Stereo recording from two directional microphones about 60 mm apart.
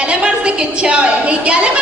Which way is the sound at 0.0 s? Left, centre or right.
Centre.